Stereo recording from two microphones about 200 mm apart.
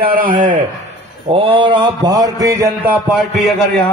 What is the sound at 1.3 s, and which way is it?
Mantra, 25° right (ahead or behind).